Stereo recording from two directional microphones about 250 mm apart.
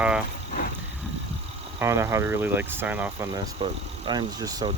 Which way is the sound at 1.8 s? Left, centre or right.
Centre.